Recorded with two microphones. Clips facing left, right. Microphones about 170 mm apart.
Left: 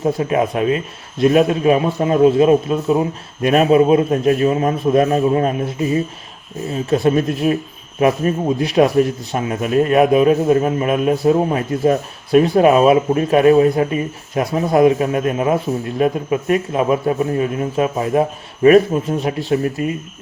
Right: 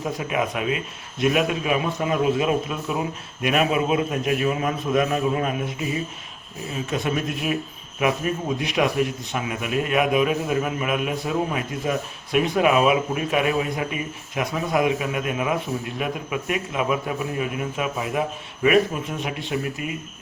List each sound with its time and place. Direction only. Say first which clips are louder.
0.0 s speech: left 8 dB; 35° left (ahead or behind)